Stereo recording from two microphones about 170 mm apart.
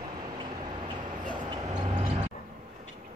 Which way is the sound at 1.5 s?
25° right (ahead or behind).